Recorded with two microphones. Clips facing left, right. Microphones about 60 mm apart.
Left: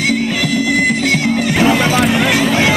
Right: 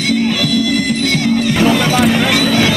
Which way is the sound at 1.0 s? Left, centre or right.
Left.